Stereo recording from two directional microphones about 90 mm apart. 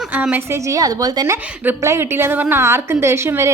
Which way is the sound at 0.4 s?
30° right (ahead or behind).